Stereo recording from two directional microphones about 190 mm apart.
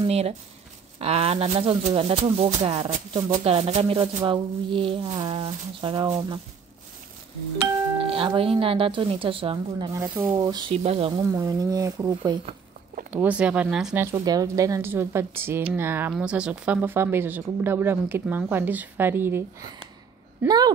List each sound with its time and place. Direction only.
0.0 s speech: 35° right (ahead or behind)
8.0 s speech: 30° right (ahead or behind)
10.7 s speech: 30° right (ahead or behind)
12.2 s speech: 30° right (ahead or behind)
13.1 s speech: 10° right (ahead or behind)
14.0 s speech: 15° right (ahead or behind)
20.4 s speech: 20° right (ahead or behind)